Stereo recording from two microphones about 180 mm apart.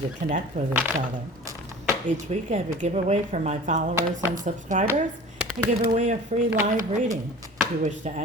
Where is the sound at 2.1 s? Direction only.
40° right (ahead or behind).